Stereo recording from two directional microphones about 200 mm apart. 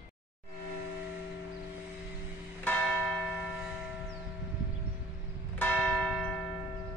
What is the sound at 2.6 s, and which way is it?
Church bell, 5° left (ahead or behind).